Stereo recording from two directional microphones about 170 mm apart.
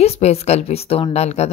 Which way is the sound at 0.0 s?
40° left (ahead or behind).